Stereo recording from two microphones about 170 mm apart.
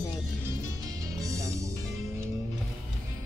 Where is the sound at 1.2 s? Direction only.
20° right (ahead or behind).